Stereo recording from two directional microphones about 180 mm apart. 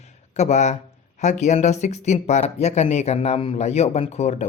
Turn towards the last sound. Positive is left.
turn(degrees=40)  # may be behind; listen again after turning